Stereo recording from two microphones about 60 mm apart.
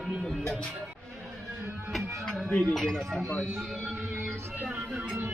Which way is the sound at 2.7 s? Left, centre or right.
Centre.